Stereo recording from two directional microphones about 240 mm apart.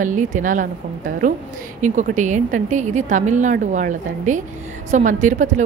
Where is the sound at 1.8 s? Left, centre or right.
Right.